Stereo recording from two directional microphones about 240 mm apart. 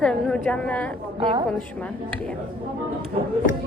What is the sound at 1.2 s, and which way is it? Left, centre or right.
Speech, centre.